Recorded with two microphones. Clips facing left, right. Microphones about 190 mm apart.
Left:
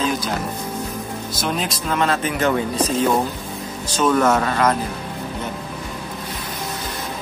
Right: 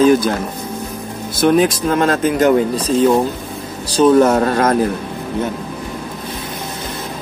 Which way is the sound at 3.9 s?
35° right (ahead or behind).